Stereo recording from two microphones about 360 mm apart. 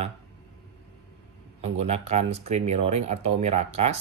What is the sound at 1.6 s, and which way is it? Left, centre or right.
Speech, centre.